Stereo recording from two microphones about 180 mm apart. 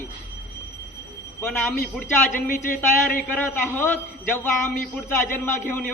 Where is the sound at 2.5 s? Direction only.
50° left (ahead or behind).